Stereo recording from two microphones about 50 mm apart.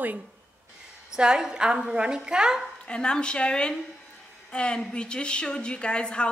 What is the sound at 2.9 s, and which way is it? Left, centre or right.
A woman's voice, centre.